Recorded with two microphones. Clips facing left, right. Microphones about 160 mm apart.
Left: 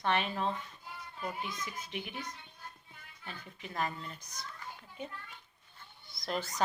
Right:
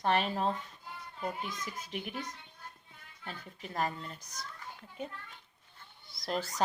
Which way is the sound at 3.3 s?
40° right (ahead or behind).